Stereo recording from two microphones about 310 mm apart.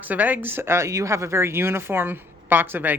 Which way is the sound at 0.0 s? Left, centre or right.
Centre.